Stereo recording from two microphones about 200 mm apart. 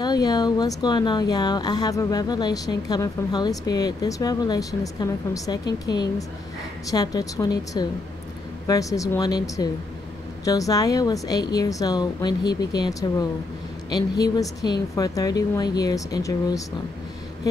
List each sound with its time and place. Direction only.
0.0 s speech: 20° left (ahead or behind)